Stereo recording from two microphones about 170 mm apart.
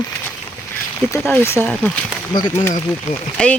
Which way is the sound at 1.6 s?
Centre (ahead or behind).